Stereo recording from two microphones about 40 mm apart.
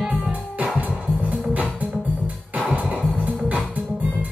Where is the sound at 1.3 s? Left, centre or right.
Right.